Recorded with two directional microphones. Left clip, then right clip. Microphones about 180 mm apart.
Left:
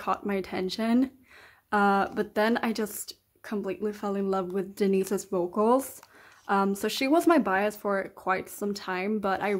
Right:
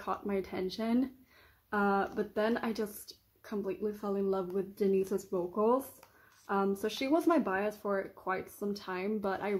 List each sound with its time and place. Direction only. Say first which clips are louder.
0.0 s speech: left 6 dB; 30° left (ahead or behind)